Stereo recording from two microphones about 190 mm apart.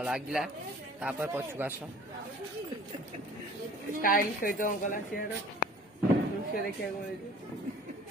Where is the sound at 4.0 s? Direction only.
50° left (ahead or behind).